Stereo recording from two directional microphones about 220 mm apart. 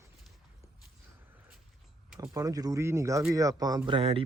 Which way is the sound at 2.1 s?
15° right (ahead or behind).